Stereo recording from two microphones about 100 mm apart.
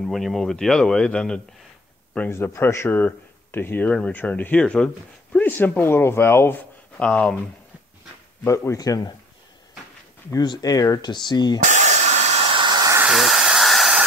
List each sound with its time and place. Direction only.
0.0 s speech: centre (ahead or behind)
2.1 s speech: 20° left (ahead or behind)
7.0 s speech: 10° left (ahead or behind)
8.5 s a man's voice: 30° left (ahead or behind)
10.3 s speech: 40° left (ahead or behind)
12.4 s a sound: 70° right (ahead or behind)
12.6 s hiss: 45° right (ahead or behind)
13.1 s a sound: 5° right (ahead or behind)